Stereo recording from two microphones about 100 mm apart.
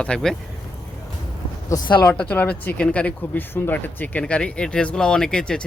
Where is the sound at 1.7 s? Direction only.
45° left (ahead or behind).